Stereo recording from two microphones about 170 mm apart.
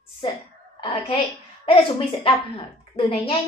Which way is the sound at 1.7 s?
30° left (ahead or behind).